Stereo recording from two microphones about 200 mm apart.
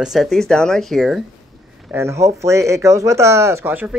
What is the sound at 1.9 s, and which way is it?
Speech, 15° right (ahead or behind).